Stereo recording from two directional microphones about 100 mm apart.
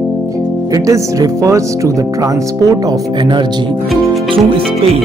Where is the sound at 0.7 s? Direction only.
35° right (ahead or behind).